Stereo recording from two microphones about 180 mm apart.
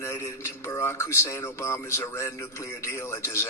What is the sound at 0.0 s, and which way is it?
A man's voice, 15° left (ahead or behind).